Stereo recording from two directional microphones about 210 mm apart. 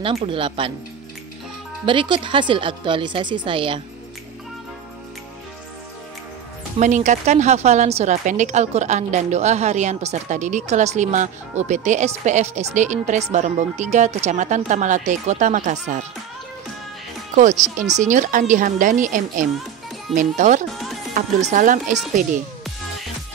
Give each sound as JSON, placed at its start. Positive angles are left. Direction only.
{"t": 0.0, "sound": "a woman's voice", "side_deg": -25}
{"t": 1.9, "sound": "a woman's voice", "side_deg": -25}
{"t": 6.8, "sound": "a woman's voice", "side_deg": -35}
{"t": 17.4, "sound": "a woman's voice", "side_deg": -35}